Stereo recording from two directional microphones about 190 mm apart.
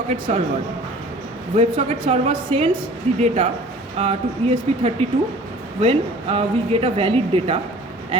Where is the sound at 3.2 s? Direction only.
35° right (ahead or behind).